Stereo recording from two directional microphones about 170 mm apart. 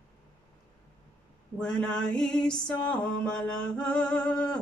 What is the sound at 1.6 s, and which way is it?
Music, 5° left (ahead or behind).